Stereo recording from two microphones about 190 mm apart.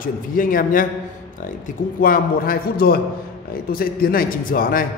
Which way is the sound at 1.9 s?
50° left (ahead or behind).